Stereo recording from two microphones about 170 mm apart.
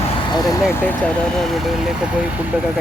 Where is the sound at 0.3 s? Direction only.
25° left (ahead or behind).